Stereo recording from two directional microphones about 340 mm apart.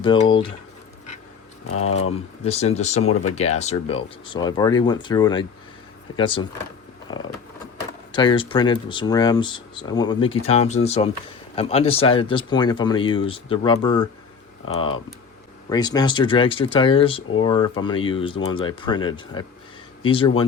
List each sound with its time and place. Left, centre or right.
0.0 s speech: centre
1.6 s speech: left
2.4 s speech: centre
7.1 s a sound: centre
8.1 s speech: centre